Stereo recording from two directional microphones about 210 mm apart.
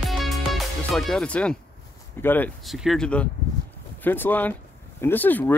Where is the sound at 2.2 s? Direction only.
10° left (ahead or behind).